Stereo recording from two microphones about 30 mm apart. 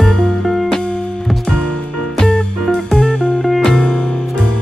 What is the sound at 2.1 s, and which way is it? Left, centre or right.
Music, left.